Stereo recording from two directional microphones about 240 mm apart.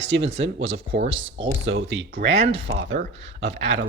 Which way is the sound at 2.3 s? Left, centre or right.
Right.